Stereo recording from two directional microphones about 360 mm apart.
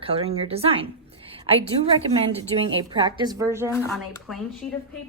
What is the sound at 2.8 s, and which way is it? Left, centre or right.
Speech, centre.